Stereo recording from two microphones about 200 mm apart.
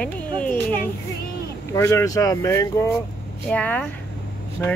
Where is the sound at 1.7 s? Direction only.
15° left (ahead or behind).